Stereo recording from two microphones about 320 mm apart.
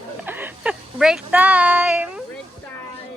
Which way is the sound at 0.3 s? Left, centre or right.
Centre.